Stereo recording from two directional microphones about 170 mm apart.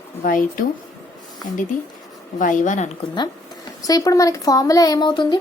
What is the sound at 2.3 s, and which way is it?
Speech, 45° left (ahead or behind).